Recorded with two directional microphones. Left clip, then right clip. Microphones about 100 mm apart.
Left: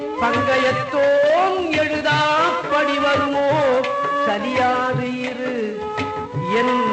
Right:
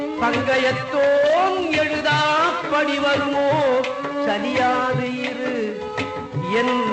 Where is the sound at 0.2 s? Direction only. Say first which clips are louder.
Left 2 dB; 25° right (ahead or behind).